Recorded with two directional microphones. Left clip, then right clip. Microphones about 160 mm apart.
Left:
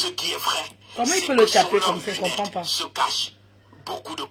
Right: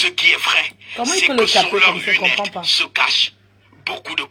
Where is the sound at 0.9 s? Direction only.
40° right (ahead or behind).